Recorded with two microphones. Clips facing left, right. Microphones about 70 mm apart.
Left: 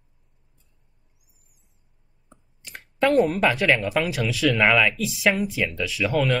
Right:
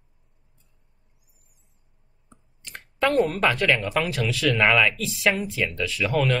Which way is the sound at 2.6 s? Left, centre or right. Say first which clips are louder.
Left 2 dB; centre.